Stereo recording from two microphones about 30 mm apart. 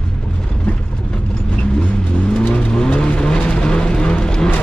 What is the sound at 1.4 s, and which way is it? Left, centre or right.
Vehicle, left.